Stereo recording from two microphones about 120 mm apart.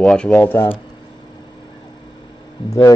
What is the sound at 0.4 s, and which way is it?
Speech, 20° left (ahead or behind).